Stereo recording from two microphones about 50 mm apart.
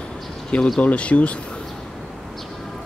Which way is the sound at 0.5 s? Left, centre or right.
Left.